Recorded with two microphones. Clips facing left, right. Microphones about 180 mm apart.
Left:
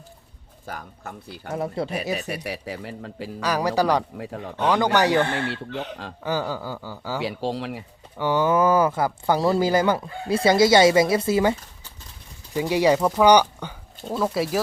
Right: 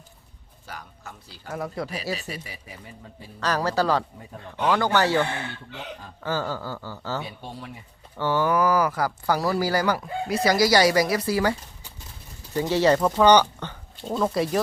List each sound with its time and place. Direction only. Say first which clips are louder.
0.6 s speech: left 5 dB; 50° left (ahead or behind)
1.5 s speech: left 4 dB; 25° left (ahead or behind)
2.1 s speech: left 7 dB; 65° left (ahead or behind); by 3.2 s 85° left
3.4 s speech: left 2 dB; 15° left (ahead or behind)
6.2 s speech: left 2 dB; 15° left (ahead or behind)
7.2 s speech: left 9 dB; 90° left
8.2 s speech: left 2 dB; 15° left (ahead or behind)
12.5 s speech: left 1 dB; 15° left (ahead or behind)